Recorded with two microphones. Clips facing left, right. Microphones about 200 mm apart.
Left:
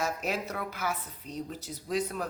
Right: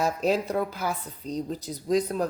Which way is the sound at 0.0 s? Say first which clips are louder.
Right 7 dB; 30° right (ahead or behind).